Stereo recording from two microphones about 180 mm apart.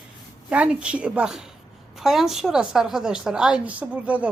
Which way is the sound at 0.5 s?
5° right (ahead or behind).